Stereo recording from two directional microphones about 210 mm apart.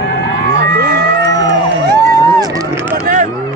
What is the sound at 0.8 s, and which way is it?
Livestock, 50° right (ahead or behind).